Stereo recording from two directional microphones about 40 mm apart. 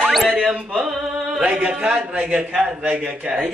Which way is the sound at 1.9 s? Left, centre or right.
Right.